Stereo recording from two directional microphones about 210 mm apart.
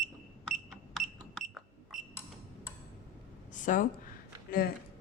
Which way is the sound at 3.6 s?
40° left (ahead or behind).